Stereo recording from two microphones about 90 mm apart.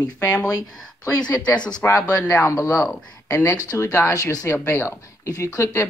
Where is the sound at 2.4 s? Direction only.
35° left (ahead or behind).